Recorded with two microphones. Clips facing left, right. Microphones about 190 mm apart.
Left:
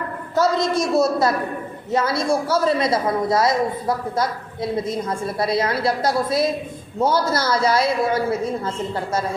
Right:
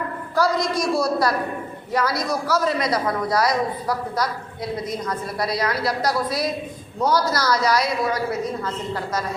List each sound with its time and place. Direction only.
0.3 s a man's voice: 25° left (ahead or behind)